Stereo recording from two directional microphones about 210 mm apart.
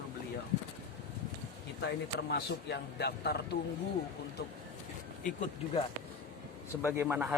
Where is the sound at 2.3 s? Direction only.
50° left (ahead or behind).